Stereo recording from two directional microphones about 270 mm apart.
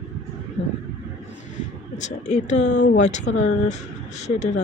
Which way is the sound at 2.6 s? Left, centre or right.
Left.